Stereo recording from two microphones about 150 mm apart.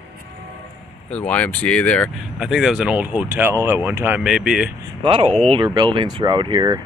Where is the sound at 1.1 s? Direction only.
10° left (ahead or behind).